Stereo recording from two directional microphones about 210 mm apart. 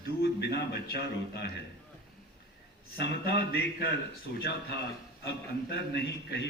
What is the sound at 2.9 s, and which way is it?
A man's voice, 50° left (ahead or behind).